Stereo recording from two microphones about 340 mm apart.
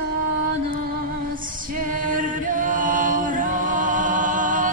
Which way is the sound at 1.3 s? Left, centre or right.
Right.